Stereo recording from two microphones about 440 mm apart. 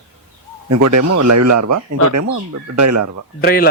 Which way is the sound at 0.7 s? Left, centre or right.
Right.